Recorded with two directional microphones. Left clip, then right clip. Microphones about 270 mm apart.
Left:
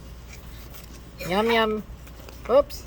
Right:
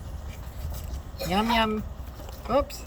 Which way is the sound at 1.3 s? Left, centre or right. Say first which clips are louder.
Left 3 dB; centre.